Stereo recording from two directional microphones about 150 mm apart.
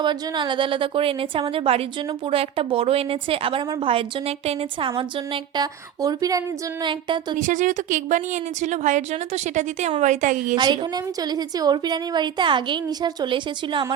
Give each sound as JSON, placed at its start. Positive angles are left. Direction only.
{"t": 0.0, "sound": "a woman's voice", "side_deg": -30}
{"t": 7.3, "sound": "a woman's voice", "side_deg": -60}
{"t": 10.5, "sound": "a woman's voice", "side_deg": -30}